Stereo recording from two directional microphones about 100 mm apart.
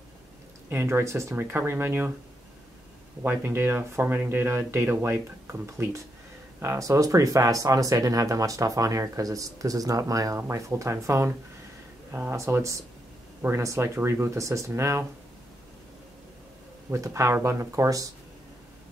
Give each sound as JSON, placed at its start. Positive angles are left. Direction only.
{"t": 0.7, "sound": "speech", "side_deg": -25}
{"t": 3.2, "sound": "speech", "side_deg": -20}
{"t": 16.9, "sound": "speech", "side_deg": -30}